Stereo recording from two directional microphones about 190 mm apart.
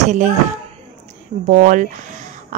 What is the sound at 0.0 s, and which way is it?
A woman's voice, 40° right (ahead or behind).